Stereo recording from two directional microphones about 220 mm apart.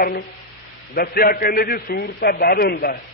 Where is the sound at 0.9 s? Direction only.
45° left (ahead or behind).